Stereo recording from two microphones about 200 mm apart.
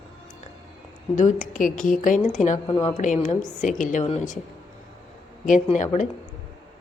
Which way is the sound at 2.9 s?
35° left (ahead or behind).